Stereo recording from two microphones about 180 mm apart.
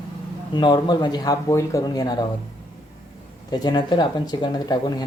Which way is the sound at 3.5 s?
25° left (ahead or behind).